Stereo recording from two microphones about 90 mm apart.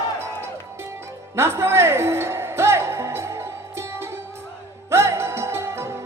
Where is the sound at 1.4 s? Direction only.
30° right (ahead or behind).